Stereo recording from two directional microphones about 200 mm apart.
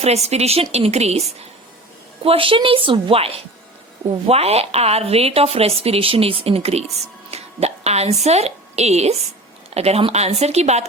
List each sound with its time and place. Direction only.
0.0 s a woman's voice: 30° right (ahead or behind)
2.2 s speech: 25° right (ahead or behind)
7.3 s a sound: 30° right (ahead or behind)
8.2 s a woman's voice: 30° right (ahead or behind)